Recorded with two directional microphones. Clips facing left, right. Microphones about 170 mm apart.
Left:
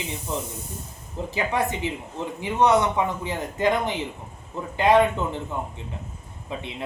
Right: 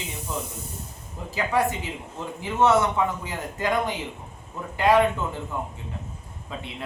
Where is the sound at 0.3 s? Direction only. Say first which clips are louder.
Left 1 dB; 20° left (ahead or behind).